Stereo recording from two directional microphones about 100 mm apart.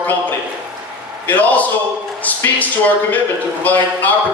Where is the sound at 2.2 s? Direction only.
15° left (ahead or behind).